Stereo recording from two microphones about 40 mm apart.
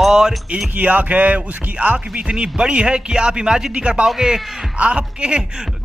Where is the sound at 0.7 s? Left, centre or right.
Right.